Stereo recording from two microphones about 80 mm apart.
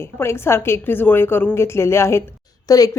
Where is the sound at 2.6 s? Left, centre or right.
Left.